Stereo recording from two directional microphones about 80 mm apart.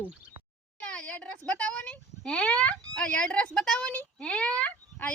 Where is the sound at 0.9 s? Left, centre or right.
Centre.